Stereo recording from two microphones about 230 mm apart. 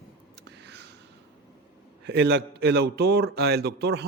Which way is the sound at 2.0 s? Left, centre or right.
Right.